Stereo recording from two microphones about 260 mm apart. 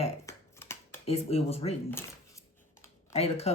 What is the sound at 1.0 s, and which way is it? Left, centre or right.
Speech, left.